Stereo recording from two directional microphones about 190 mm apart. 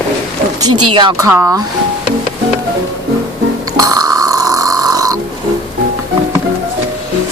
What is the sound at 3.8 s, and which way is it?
Burping, 20° right (ahead or behind).